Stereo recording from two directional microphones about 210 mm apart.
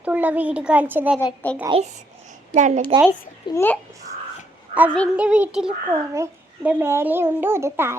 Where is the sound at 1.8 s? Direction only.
35° right (ahead or behind).